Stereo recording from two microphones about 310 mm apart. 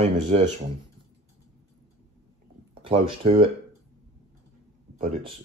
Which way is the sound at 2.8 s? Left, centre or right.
Centre.